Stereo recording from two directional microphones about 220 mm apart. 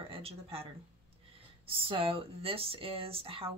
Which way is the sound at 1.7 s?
25° right (ahead or behind).